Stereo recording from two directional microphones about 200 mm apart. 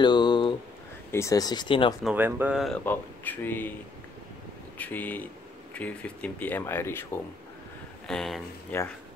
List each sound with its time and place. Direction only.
0.0 s a sound: 20° left (ahead or behind)
1.1 s speech: 15° left (ahead or behind)
2.0 s speech: 10° right (ahead or behind)
2.8 s speech: 10° left (ahead or behind)
4.7 s speech: 10° left (ahead or behind)